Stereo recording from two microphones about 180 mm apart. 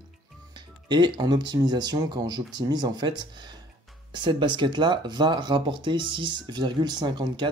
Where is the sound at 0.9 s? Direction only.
25° right (ahead or behind).